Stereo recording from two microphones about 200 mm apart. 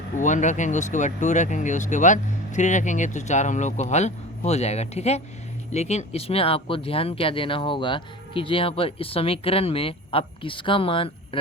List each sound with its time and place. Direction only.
0.2 s speech: 40° left (ahead or behind)